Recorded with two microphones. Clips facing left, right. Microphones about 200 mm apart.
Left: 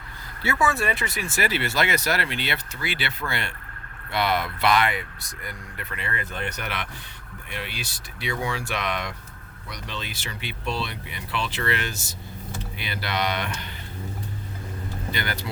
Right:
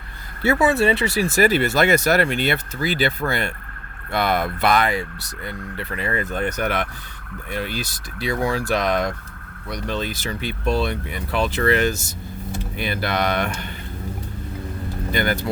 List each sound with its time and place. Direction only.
0.6 s speech: 25° right (ahead or behind); by 4.9 s 45° right (ahead or behind)
5.7 s speech: 35° right (ahead or behind); by 13.7 s 50° right (ahead or behind)
15.1 s speech: 50° right (ahead or behind)